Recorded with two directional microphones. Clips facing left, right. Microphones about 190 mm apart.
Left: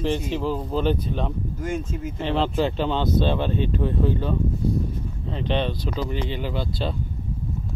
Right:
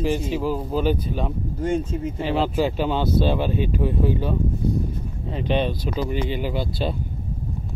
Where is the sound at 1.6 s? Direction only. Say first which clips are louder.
Right 6 dB; 30° right (ahead or behind).